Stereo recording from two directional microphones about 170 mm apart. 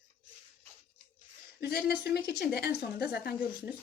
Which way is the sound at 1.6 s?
70° left (ahead or behind).